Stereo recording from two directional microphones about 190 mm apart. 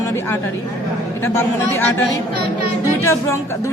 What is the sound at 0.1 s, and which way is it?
Speech, 15° left (ahead or behind).